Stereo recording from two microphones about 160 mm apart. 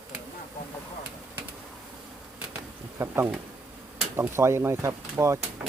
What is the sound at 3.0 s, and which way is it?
Speech, 15° right (ahead or behind).